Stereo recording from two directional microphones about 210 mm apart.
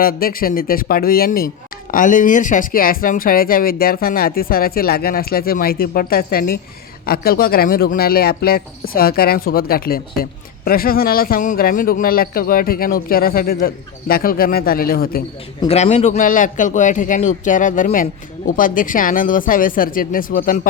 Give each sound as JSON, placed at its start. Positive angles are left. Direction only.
{"t": 0.0, "sound": "speech", "side_deg": 45}
{"t": 15.6, "sound": "a man's voice", "side_deg": 30}